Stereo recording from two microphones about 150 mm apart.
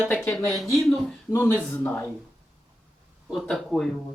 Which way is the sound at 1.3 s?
15° left (ahead or behind).